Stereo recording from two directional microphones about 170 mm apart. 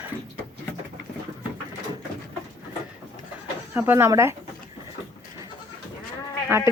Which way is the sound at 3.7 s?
10° right (ahead or behind).